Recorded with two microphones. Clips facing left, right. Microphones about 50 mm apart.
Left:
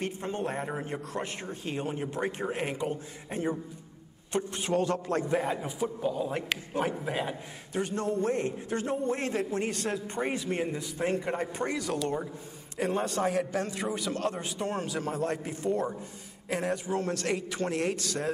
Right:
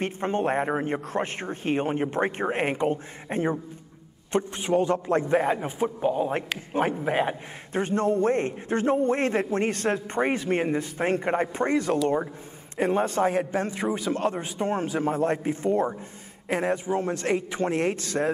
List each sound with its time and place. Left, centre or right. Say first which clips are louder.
0.0 s a man's voice: right 7 dB; right
4.3 s a man's voice: right 5 dB; right